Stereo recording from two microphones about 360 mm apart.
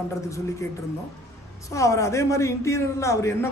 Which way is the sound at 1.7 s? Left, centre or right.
Centre.